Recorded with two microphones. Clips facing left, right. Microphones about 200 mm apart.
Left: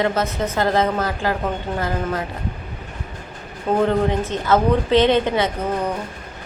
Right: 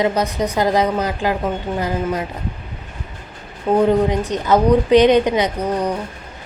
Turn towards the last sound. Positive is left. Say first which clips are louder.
# right 2 dB
turn(degrees=-15)  # may be behind; listen again after turning